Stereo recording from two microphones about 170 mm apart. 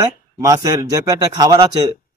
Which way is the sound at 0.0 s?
20° right (ahead or behind).